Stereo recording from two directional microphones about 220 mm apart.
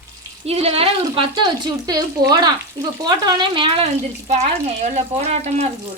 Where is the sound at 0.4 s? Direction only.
25° right (ahead or behind).